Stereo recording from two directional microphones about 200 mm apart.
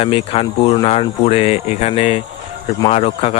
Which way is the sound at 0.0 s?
30° left (ahead or behind).